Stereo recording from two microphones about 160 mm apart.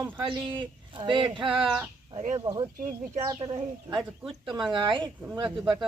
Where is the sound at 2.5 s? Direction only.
15° right (ahead or behind).